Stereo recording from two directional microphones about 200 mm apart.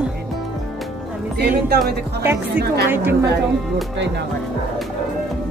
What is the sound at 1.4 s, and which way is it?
Speech, 55° right (ahead or behind).